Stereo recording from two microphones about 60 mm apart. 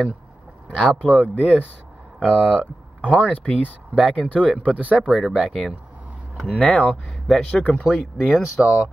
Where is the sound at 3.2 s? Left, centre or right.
Left.